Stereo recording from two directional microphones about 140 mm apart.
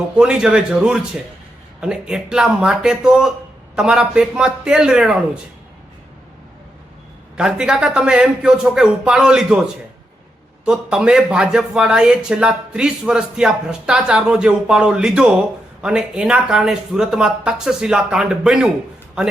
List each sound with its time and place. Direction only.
0.2 s speech: 5° right (ahead or behind)
7.3 s speech: 5° right (ahead or behind)
10.7 s speech: 5° right (ahead or behind)